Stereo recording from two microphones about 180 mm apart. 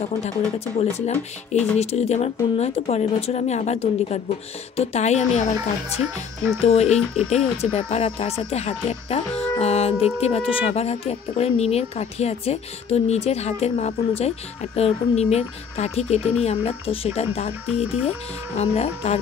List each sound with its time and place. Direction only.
0.7 s speech: 35° left (ahead or behind)
6.0 s speech: 10° right (ahead or behind)
6.6 s speech: 35° left (ahead or behind)